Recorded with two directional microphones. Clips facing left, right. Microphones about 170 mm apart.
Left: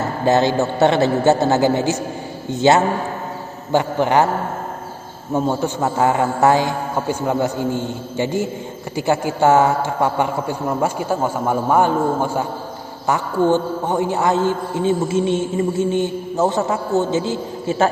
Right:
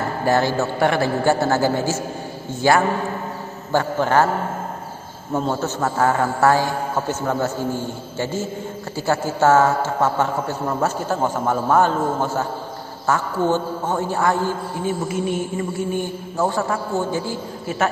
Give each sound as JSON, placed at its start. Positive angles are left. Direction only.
{"t": 0.2, "sound": "a man's voice", "side_deg": 20}
{"t": 5.3, "sound": "a man's voice", "side_deg": 15}